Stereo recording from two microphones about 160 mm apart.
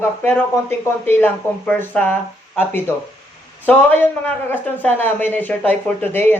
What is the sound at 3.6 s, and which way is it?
Speech, 10° left (ahead or behind).